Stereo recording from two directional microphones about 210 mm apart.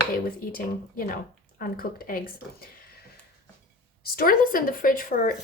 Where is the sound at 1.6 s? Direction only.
45° left (ahead or behind).